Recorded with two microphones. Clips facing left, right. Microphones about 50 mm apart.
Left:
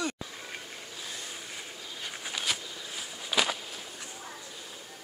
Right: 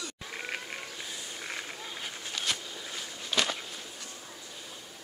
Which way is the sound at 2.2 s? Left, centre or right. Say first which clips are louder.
Left 1 dB; centre.